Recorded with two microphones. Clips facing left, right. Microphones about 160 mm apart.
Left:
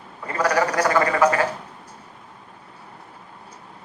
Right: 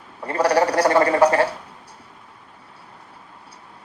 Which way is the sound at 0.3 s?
35° right (ahead or behind).